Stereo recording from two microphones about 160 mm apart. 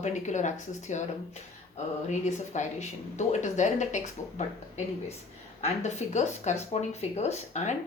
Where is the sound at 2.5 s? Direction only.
45° left (ahead or behind).